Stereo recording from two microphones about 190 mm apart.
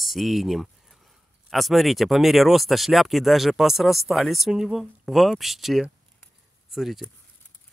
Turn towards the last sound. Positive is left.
turn(degrees=0)  # may be behind; listen again after turning